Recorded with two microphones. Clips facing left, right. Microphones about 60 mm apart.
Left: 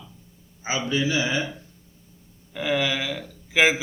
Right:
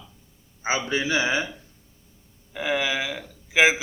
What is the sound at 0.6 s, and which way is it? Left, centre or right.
Speech, right.